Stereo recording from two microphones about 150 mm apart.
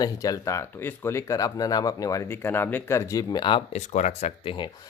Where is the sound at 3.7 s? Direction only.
50° left (ahead or behind).